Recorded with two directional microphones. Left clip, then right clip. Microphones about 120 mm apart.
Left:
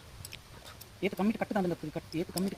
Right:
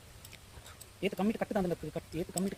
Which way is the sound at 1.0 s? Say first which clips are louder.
Left 1 dB; 65° right (ahead or behind).